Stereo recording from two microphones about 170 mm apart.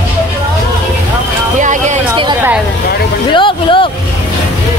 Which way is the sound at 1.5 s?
45° right (ahead or behind).